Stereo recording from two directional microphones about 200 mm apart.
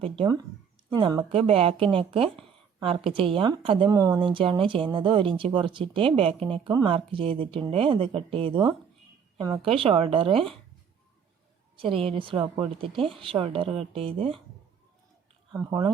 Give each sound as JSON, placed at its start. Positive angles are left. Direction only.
{"t": 0.0, "sound": "speech", "side_deg": -25}
{"t": 11.8, "sound": "speech", "side_deg": -25}